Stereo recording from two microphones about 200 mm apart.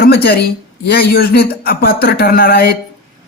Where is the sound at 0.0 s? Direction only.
50° left (ahead or behind).